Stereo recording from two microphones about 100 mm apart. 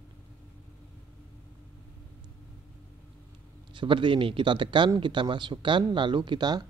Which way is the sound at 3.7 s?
55° right (ahead or behind).